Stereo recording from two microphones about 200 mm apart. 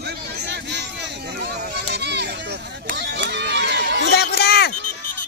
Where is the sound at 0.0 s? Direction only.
55° right (ahead or behind).